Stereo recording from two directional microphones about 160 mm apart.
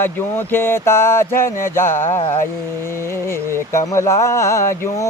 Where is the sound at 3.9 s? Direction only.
20° left (ahead or behind).